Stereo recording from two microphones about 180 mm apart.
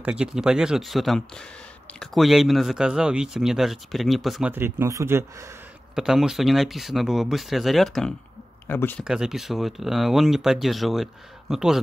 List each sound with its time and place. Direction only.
0.0 s speech: 5° right (ahead or behind)
5.9 s speech: 5° right (ahead or behind)
8.6 s speech: 10° left (ahead or behind)
9.0 s speech: 5° right (ahead or behind)